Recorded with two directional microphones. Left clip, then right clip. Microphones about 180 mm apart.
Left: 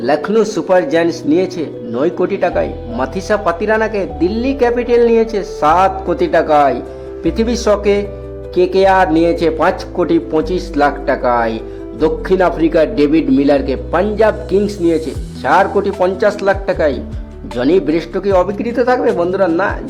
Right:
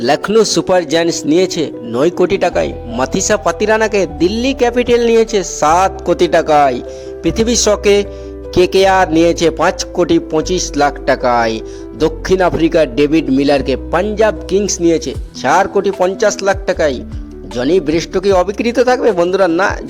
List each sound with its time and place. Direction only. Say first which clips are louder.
0.0 s a man's voice: right 2 dB; 30° right (ahead or behind)